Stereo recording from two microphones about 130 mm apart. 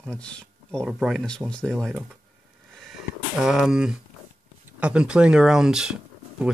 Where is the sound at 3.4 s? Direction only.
5° right (ahead or behind).